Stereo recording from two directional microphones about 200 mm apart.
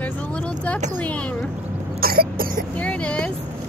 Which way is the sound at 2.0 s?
50° right (ahead or behind).